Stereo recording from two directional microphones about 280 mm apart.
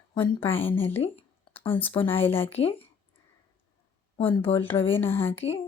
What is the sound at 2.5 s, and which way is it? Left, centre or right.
Speech, left.